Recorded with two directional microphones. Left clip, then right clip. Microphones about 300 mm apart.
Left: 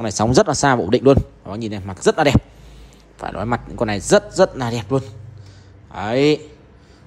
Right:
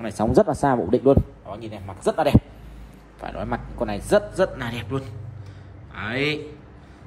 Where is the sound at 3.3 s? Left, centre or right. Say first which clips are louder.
Left 6 dB; right.